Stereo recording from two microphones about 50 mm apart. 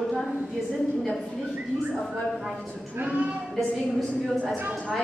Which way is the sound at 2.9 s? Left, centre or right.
Right.